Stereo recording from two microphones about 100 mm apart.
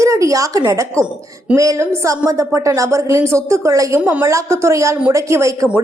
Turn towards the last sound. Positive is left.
turn(degrees=-30)  # may be behind; listen again after turning